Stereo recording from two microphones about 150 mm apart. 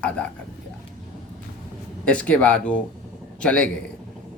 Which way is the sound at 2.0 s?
10° left (ahead or behind).